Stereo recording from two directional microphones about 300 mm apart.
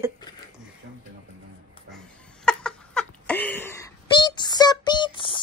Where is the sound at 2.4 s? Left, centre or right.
Centre.